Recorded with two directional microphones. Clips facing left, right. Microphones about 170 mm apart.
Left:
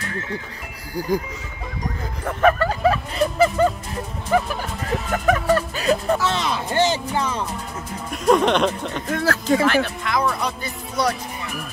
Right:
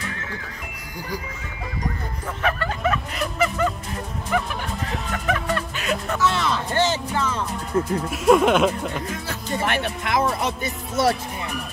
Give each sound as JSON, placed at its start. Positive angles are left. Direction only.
{"t": 2.4, "sound": "music", "side_deg": 35}
{"t": 6.3, "sound": "speech", "side_deg": 15}
{"t": 8.1, "sound": "speech", "side_deg": -5}
{"t": 9.1, "sound": "speech", "side_deg": 90}
{"t": 10.0, "sound": "speech", "side_deg": -25}